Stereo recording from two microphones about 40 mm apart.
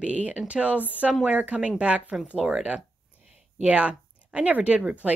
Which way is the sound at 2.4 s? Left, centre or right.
Centre.